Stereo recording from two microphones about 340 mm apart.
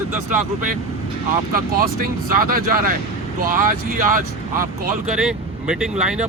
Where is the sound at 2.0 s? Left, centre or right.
Right.